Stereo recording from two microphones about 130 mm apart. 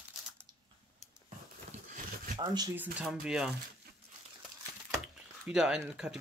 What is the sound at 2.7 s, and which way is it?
Speech, 15° right (ahead or behind).